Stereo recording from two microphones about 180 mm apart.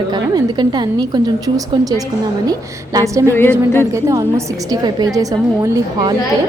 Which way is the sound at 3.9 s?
15° right (ahead or behind).